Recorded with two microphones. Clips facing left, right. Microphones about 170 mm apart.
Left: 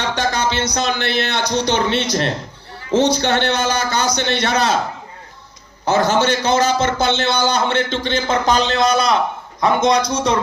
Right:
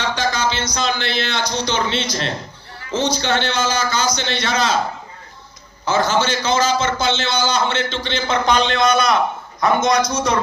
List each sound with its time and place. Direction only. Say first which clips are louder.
0.0 s a man's voice: left 1 dB; 60° left (ahead or behind)
5.8 s a man's voice: left 2 dB; 60° left (ahead or behind); by 10.0 s 30° left (ahead or behind)